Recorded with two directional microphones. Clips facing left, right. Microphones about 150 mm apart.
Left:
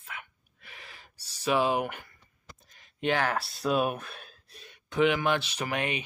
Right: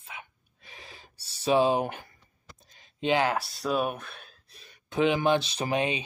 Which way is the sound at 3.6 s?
Centre (ahead or behind).